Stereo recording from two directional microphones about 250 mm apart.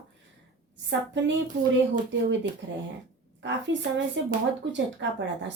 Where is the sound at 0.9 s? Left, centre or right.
Right.